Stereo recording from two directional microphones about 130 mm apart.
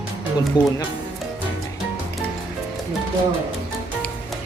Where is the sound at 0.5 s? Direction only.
35° left (ahead or behind).